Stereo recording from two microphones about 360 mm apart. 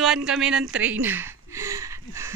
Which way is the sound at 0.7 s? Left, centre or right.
Centre.